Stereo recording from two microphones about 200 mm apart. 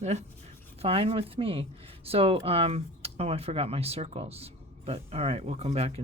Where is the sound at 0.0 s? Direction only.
35° right (ahead or behind).